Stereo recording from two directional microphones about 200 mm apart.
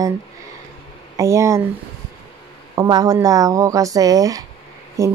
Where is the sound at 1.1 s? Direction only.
15° right (ahead or behind).